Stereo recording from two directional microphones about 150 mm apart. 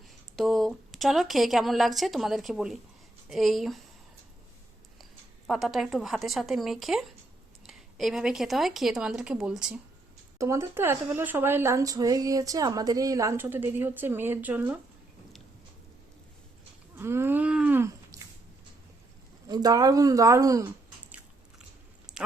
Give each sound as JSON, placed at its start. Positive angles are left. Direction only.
{"t": 0.3, "sound": "speech", "side_deg": 0}
{"t": 5.5, "sound": "speech", "side_deg": 0}
{"t": 10.3, "sound": "speech", "side_deg": -20}
{"t": 17.0, "sound": "a sound", "side_deg": -15}
{"t": 19.5, "sound": "speech", "side_deg": -25}
{"t": 22.1, "sound": "a sound", "side_deg": -5}